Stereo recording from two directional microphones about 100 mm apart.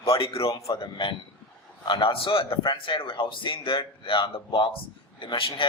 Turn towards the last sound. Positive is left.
turn(degrees=55)  # may be behind; listen again after turning